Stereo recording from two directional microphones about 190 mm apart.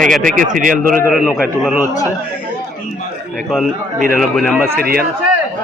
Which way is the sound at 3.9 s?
45° right (ahead or behind).